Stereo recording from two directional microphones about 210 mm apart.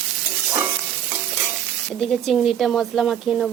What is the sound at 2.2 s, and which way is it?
Speech, centre (ahead or behind).